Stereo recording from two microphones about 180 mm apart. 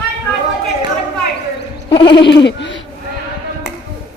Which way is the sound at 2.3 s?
75° left (ahead or behind).